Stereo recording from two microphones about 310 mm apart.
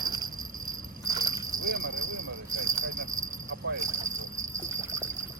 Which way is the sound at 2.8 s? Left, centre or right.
Right.